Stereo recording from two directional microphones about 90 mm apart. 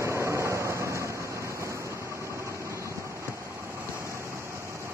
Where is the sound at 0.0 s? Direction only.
30° right (ahead or behind).